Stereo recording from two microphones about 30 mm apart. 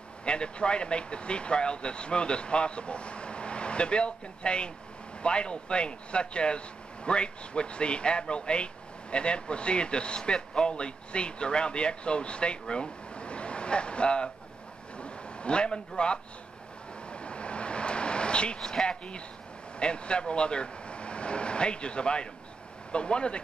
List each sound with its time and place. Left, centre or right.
0.2 s a man's voice: left
15.0 s a sound: left
17.1 s vehicle: left
18.6 s speech: centre
18.9 s a man's voice: left